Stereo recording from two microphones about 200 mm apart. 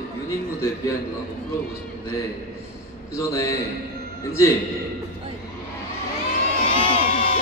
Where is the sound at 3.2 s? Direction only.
15° left (ahead or behind).